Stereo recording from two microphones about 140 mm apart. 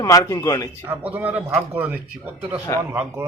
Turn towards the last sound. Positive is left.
turn(degrees=-15)  # may be behind; listen again after turning